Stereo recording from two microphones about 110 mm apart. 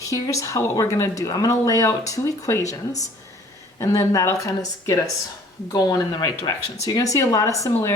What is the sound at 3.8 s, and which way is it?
Speech, 30° left (ahead or behind).